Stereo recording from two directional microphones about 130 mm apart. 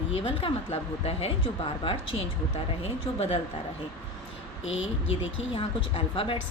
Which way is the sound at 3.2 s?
50° left (ahead or behind).